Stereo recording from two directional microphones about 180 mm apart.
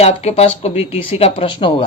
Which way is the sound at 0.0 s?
35° left (ahead or behind).